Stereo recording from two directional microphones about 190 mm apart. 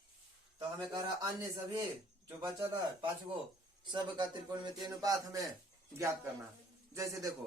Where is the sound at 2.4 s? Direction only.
25° right (ahead or behind).